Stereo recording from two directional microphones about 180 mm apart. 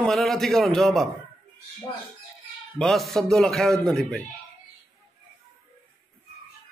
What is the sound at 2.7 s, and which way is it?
A man's voice, centre (ahead or behind).